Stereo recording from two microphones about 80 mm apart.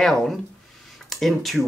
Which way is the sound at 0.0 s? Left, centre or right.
Centre.